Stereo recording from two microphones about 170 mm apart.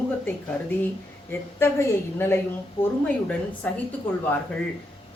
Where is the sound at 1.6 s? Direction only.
15° left (ahead or behind).